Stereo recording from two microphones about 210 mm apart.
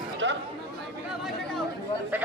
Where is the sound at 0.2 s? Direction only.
60° right (ahead or behind).